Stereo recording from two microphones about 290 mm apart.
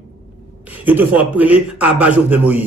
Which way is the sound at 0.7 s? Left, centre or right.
Centre.